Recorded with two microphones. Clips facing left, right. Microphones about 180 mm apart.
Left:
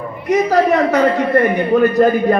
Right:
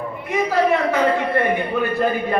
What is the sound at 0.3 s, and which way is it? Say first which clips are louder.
A man's voice: left 5 dB; 40° left (ahead or behind).